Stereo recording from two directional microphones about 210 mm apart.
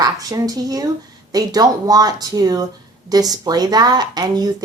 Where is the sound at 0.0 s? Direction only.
15° right (ahead or behind).